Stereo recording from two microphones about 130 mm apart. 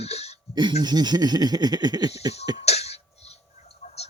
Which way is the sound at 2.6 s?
55° left (ahead or behind).